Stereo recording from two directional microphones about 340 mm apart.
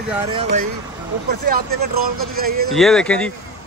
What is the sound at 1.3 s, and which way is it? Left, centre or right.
Speech, right.